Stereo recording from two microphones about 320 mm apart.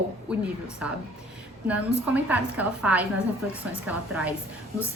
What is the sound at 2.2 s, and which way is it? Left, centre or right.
A woman's voice, centre.